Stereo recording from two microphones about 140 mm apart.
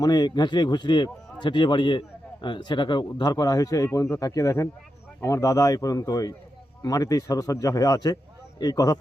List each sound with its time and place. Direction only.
0.0 s a man's voice: 30° left (ahead or behind)